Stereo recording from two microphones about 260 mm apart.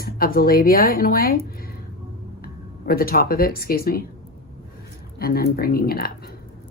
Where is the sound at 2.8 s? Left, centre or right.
Left.